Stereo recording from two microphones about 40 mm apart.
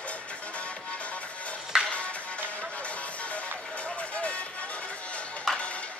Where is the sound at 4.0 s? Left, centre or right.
Left.